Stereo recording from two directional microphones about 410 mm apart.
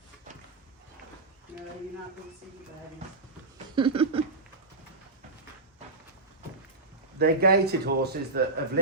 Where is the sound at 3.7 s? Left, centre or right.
Centre.